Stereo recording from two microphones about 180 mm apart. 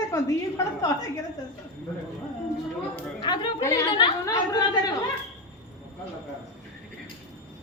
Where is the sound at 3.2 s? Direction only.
25° left (ahead or behind).